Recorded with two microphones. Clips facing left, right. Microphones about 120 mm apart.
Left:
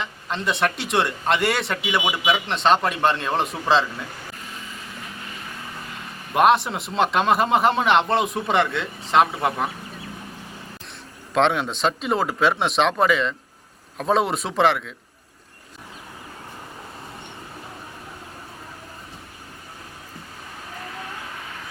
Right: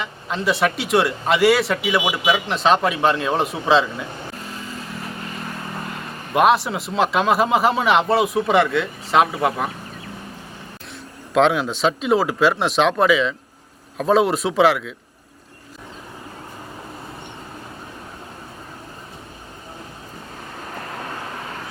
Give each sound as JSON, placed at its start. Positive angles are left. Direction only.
{"t": 0.0, "sound": "a man's voice", "side_deg": 0}
{"t": 5.2, "sound": "vehicle", "side_deg": -45}
{"t": 6.3, "sound": "a man's voice", "side_deg": 0}
{"t": 11.3, "sound": "a man's voice", "side_deg": 0}
{"t": 20.9, "sound": "vehicle", "side_deg": -50}